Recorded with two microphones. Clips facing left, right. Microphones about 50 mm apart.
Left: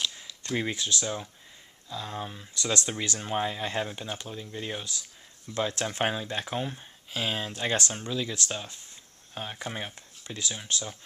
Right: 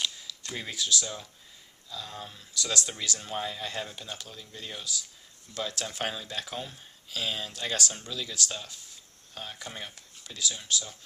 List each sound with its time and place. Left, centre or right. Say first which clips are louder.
0.5 s speech: left 3 dB; left